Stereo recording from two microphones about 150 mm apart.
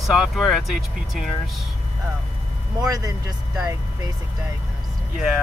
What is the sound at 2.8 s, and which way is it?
Speech, 25° right (ahead or behind).